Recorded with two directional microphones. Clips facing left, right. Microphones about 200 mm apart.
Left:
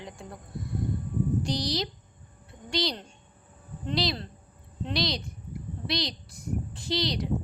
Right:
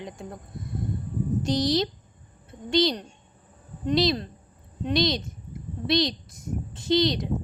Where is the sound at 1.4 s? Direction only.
20° right (ahead or behind).